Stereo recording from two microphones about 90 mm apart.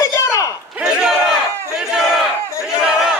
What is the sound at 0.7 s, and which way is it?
Battle cry, 5° right (ahead or behind).